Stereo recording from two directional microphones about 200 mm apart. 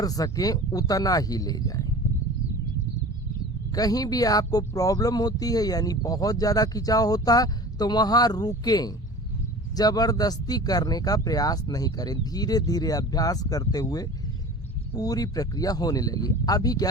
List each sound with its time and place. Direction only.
0.0 s speech: 20° left (ahead or behind)
3.8 s speech: 20° left (ahead or behind)